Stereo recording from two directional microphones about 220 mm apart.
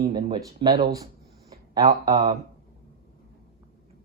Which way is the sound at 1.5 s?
20° right (ahead or behind).